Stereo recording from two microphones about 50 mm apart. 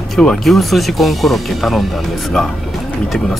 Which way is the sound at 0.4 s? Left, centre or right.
Centre.